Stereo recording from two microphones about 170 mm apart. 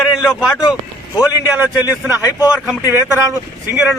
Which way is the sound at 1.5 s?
10° right (ahead or behind).